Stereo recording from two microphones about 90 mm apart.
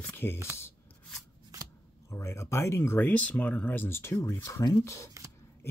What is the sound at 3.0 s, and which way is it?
Speech, 15° left (ahead or behind).